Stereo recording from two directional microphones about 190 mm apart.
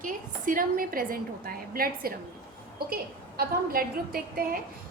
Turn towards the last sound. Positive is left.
turn(degrees=-50)  # may be behind; listen again after turning